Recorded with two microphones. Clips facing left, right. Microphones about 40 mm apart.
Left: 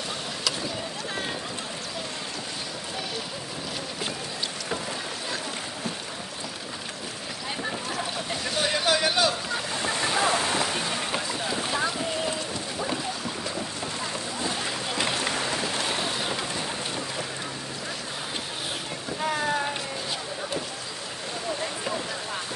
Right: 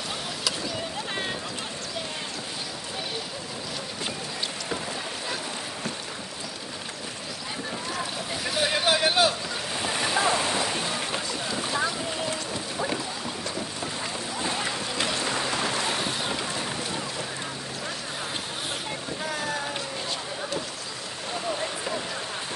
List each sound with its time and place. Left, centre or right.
8.5 s vehicle: centre
8.7 s a sound: centre
9.8 s waves: centre
11.1 s boat: centre
16.0 s boat: centre